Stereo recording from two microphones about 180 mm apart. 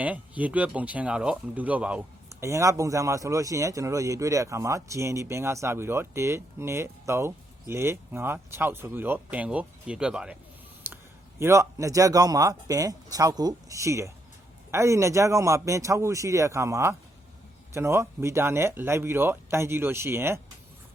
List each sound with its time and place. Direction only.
0.0 s speech: 10° right (ahead or behind)
11.3 s speech: 15° right (ahead or behind)